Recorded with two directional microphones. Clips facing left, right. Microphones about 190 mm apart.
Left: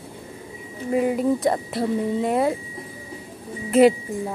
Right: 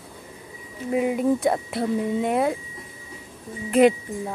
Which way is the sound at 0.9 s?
Centre (ahead or behind).